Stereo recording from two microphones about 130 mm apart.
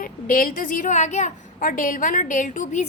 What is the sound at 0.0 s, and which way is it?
A woman's voice, 90° left.